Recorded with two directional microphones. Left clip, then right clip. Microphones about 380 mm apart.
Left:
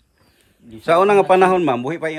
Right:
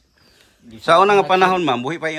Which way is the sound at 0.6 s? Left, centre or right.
Centre.